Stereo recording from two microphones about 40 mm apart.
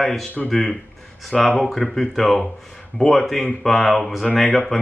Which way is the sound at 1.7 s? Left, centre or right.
Centre.